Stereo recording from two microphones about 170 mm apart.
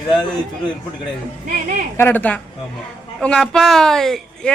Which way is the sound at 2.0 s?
10° left (ahead or behind).